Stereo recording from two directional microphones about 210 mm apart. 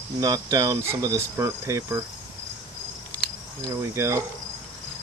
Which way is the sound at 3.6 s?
15° right (ahead or behind).